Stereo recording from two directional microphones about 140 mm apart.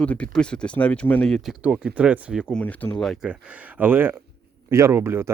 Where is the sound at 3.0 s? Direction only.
Centre (ahead or behind).